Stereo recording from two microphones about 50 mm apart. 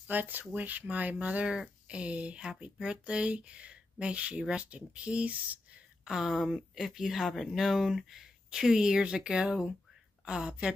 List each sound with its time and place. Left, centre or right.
0.0 s speech: right
6.2 s speech: centre